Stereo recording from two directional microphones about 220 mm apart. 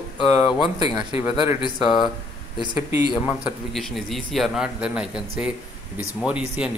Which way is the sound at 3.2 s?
Centre (ahead or behind).